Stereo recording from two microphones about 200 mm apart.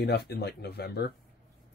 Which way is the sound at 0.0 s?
55° left (ahead or behind).